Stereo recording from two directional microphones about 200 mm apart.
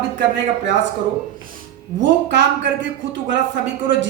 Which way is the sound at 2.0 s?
65° right (ahead or behind).